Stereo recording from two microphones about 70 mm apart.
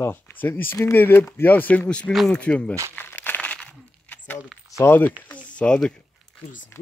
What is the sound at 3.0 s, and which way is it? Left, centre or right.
Crumpling, left.